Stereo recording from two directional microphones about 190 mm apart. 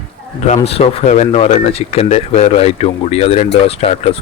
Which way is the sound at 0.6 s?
30° left (ahead or behind).